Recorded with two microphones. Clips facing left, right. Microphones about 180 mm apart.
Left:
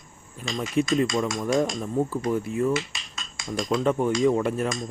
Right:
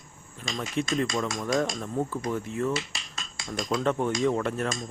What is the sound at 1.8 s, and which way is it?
Speech, 10° left (ahead or behind).